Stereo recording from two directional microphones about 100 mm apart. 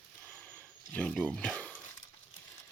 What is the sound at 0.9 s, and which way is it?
Speech, 15° left (ahead or behind).